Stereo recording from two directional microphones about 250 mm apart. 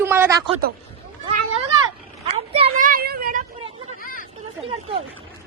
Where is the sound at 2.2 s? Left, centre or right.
Right.